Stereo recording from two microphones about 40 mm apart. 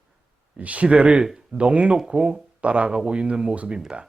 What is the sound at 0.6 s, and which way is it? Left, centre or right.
Speech, right.